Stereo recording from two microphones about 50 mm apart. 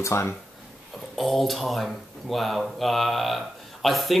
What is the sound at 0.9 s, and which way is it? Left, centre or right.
Speech, centre.